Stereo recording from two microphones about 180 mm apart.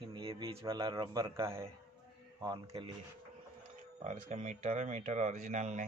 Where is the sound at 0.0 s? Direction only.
30° right (ahead or behind).